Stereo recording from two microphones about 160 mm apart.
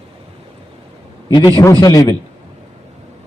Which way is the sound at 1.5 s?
20° left (ahead or behind).